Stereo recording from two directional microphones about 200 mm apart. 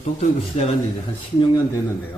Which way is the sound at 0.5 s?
30° left (ahead or behind).